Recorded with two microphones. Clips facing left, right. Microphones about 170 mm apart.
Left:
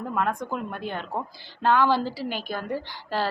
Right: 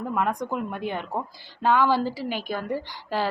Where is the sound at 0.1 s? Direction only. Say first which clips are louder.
Right 1 dB; 15° right (ahead or behind).